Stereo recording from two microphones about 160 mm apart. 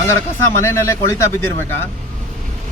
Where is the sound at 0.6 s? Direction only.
15° left (ahead or behind).